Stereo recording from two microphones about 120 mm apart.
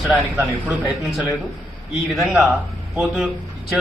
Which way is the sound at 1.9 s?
Centre (ahead or behind).